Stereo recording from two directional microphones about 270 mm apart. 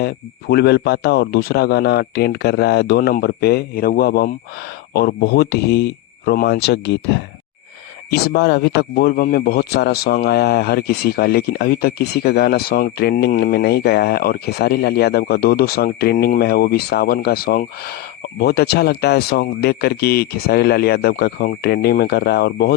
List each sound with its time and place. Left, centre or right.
0.0 s a man's voice: left